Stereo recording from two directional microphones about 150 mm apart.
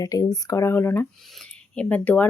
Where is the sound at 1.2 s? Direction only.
Centre (ahead or behind).